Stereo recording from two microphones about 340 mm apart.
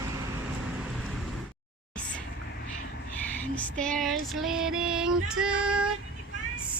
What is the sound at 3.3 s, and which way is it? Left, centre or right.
Female singing, centre.